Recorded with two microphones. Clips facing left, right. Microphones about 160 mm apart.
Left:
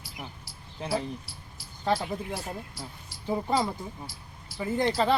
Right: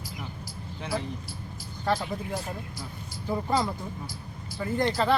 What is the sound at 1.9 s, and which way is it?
Speech, 5° left (ahead or behind).